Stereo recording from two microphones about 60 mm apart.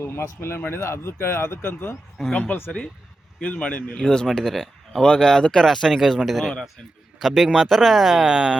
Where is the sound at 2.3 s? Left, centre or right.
Left.